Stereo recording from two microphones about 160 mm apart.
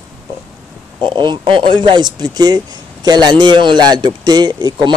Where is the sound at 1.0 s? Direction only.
30° right (ahead or behind).